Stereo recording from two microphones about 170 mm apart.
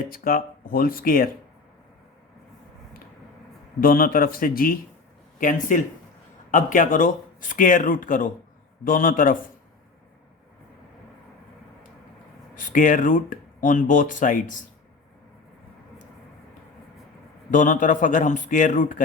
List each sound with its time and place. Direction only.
0.1 s speech: 55° left (ahead or behind)
3.8 s speech: 60° left (ahead or behind)
12.5 s speech: 50° left (ahead or behind)
17.5 s speech: 50° left (ahead or behind)